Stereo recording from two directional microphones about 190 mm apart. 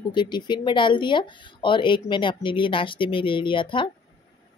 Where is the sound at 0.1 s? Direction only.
25° left (ahead or behind).